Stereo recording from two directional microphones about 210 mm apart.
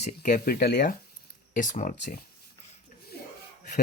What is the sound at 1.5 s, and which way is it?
Speech, 35° left (ahead or behind).